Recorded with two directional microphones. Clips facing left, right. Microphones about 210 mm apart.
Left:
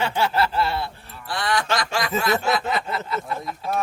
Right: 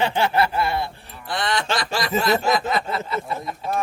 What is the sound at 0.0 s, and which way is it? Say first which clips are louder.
Speech: right 2 dB; 20° right (ahead or behind).